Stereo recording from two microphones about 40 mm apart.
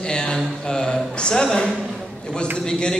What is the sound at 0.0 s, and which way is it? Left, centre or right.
Mantra, left.